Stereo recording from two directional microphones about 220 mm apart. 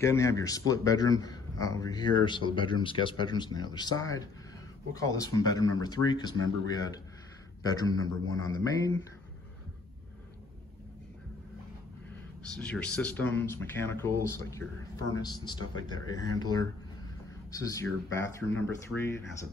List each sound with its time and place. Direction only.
0.0 s a man's voice: 15° left (ahead or behind)
7.7 s a man's voice: 15° left (ahead or behind)
12.5 s a man's voice: 5° left (ahead or behind)